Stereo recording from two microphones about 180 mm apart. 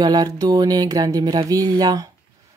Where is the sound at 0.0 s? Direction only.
20° right (ahead or behind).